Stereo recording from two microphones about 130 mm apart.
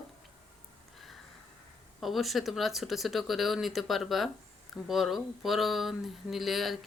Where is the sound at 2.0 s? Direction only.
Centre (ahead or behind).